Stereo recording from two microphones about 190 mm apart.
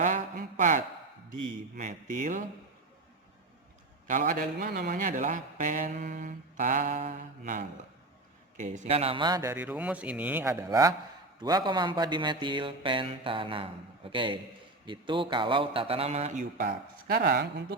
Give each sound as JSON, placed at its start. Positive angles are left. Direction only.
{"t": 0.0, "sound": "a sound", "side_deg": -40}
{"t": 1.3, "sound": "speech", "side_deg": -40}
{"t": 4.0, "sound": "a man's voice", "side_deg": -45}